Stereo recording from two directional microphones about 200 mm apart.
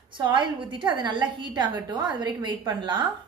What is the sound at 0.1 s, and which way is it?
A woman's voice, 25° right (ahead or behind).